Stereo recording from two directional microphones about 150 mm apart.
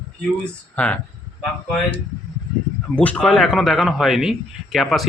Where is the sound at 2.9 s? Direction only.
10° left (ahead or behind).